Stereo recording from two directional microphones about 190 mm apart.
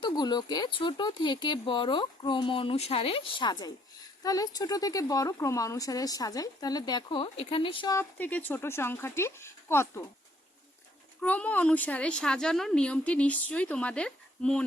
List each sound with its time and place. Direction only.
0.0 s speech: 20° left (ahead or behind)
7.9 s a woman's voice: 10° left (ahead or behind)
11.2 s a woman's voice: 10° left (ahead or behind)